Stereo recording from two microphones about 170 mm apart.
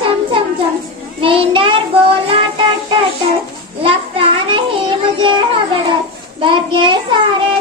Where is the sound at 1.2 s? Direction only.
30° right (ahead or behind).